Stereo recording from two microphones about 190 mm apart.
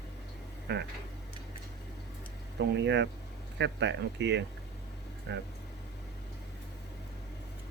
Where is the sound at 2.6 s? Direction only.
65° right (ahead or behind).